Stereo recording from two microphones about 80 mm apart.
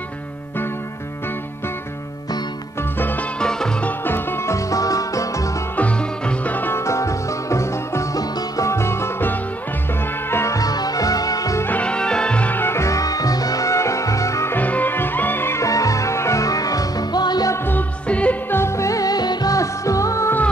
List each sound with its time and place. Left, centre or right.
3.0 s music: left
3.3 s music: centre
4.0 s music: left
5.8 s music: centre
6.8 s music: left
10.6 s music: left
11.8 s music: centre; by 14.5 s left
14.5 s music: left
15.6 s music: left
17.6 s music: centre
18.5 s music: left